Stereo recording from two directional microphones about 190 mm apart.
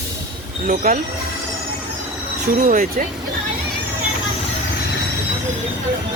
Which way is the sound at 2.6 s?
40° right (ahead or behind).